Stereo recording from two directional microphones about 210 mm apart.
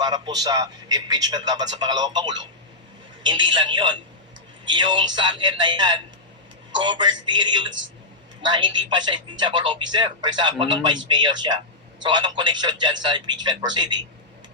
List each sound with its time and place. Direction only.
0.0 s a man's voice: 20° right (ahead or behind)